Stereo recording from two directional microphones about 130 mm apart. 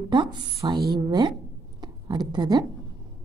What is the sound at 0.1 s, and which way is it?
Speech, 35° right (ahead or behind).